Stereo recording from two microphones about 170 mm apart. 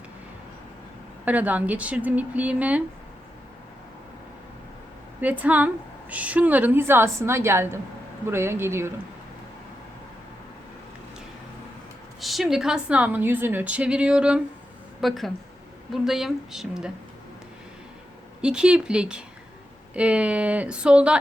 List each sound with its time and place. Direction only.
1.2 s a woman's voice: 10° right (ahead or behind)
5.2 s a woman's voice: 10° right (ahead or behind)
12.2 s a woman's voice: centre (ahead or behind)
18.4 s a woman's voice: 5° right (ahead or behind)